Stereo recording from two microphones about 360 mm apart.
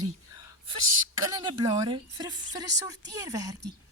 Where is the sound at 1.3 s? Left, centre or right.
Centre.